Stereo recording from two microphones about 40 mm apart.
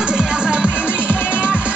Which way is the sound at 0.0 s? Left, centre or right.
Right.